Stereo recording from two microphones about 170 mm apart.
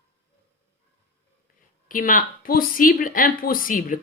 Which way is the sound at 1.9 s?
55° left (ahead or behind).